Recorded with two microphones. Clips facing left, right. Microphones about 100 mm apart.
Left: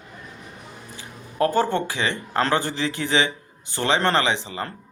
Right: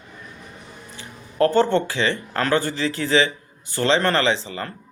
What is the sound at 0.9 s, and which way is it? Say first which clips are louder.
Speech: right 3 dB; 15° left (ahead or behind).